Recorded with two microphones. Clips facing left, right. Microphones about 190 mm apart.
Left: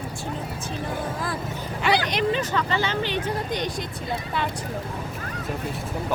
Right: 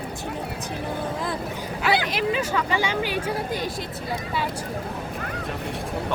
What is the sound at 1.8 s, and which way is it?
Speech, 5° right (ahead or behind).